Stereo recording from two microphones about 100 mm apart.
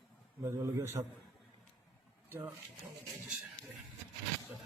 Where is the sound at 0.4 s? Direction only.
25° right (ahead or behind).